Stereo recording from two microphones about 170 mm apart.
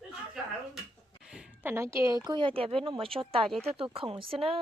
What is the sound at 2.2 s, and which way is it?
Speech, 30° right (ahead or behind).